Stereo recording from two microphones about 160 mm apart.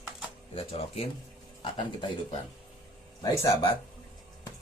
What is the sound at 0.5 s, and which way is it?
Speech, 40° left (ahead or behind).